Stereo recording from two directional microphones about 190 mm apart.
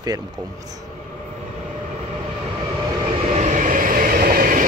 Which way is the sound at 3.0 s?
30° right (ahead or behind).